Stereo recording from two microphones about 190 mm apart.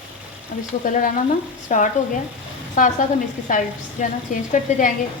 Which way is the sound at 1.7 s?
40° left (ahead or behind).